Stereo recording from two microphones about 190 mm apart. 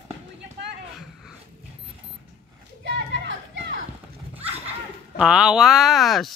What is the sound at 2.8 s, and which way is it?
Children playing, 65° right (ahead or behind).